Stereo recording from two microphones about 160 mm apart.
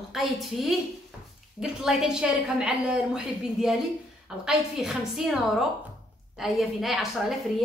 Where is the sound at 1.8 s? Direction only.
5° right (ahead or behind).